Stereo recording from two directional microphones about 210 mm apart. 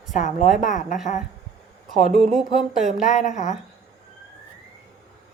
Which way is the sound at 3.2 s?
35° left (ahead or behind).